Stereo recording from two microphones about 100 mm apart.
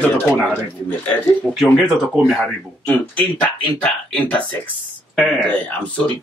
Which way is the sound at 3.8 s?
10° left (ahead or behind).